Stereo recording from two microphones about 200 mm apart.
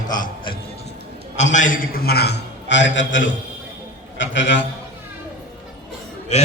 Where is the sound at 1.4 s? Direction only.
35° left (ahead or behind); by 4.6 s 65° left (ahead or behind).